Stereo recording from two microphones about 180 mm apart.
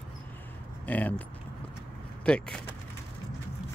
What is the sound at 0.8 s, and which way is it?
Speech, 10° left (ahead or behind).